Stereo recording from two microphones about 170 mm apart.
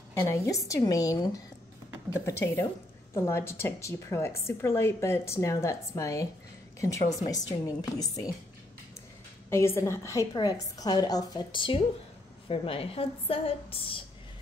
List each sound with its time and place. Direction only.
0.3 s a woman's voice: 20° left (ahead or behind)
7.2 s a woman's voice: 20° left (ahead or behind)
9.5 s a woman's voice: 15° left (ahead or behind); by 14.0 s 35° left (ahead or behind)